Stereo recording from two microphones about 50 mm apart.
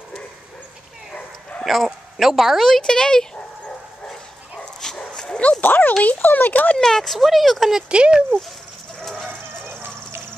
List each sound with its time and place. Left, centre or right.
1.6 s dog: centre
1.9 s speech: centre
4.9 s dog: centre
5.6 s speech: left
6.8 s speech: centre
7.9 s speech: right
9.0 s dog: centre
9.7 s dog: right